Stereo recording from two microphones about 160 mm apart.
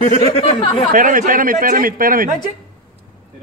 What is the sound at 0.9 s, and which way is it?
A man's voice, 55° right (ahead or behind).